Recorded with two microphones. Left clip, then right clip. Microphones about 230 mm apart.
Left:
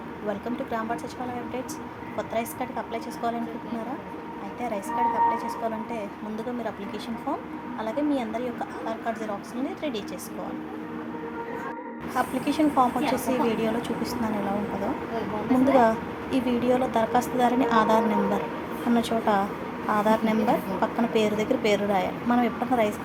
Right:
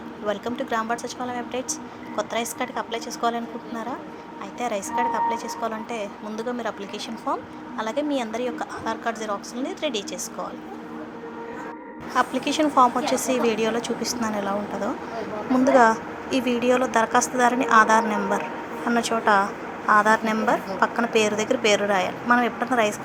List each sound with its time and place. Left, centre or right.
0.3 s a woman's voice: centre
2.1 s a woman's voice: centre
4.9 s a woman's voice: centre
7.8 s a woman's voice: centre
12.1 s a woman's voice: centre
15.6 s a woman's voice: centre